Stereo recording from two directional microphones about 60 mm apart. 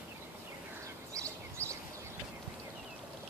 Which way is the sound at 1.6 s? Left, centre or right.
Right.